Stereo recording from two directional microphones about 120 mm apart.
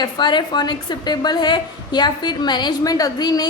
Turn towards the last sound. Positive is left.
turn(degrees=35)  # may be behind; listen again after turning